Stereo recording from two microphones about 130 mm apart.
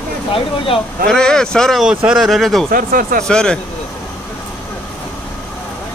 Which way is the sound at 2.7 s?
90° right.